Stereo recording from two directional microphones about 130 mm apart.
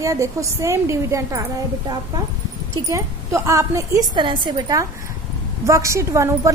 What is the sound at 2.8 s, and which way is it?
A woman's voice, 25° right (ahead or behind).